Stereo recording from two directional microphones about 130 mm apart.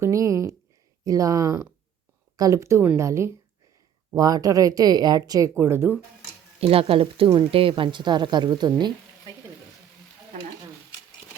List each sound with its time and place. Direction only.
0.0 s speech: 25° right (ahead or behind)
6.6 s a woman's voice: 45° right (ahead or behind)